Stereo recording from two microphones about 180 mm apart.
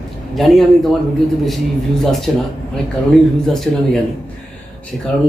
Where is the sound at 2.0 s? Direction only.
Centre (ahead or behind).